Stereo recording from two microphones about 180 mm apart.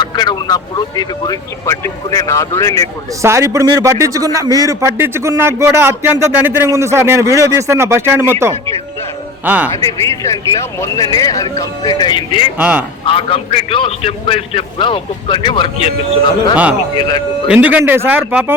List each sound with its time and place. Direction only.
0.0 s speech: 25° left (ahead or behind)
3.2 s a man's voice: 15° right (ahead or behind)
10.1 s speech: 15° left (ahead or behind)
12.5 s a man's voice: 5° right (ahead or behind)
13.1 s a man's voice: 30° left (ahead or behind)
16.9 s speech: 25° left (ahead or behind)
17.5 s a man's voice: 5° right (ahead or behind)